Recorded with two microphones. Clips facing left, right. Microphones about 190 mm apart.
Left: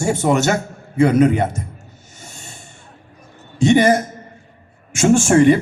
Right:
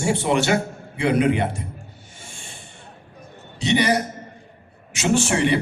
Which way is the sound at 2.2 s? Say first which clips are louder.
Left 3 dB; 40° left (ahead or behind).